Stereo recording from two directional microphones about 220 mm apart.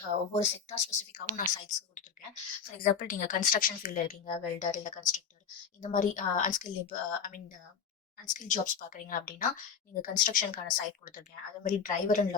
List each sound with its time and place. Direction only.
0.3 s speech: 30° left (ahead or behind)